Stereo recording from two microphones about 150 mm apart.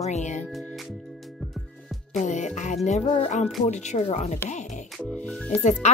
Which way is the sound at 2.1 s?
55° left (ahead or behind).